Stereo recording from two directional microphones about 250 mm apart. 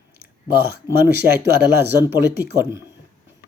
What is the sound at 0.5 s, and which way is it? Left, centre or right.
A man's voice, right.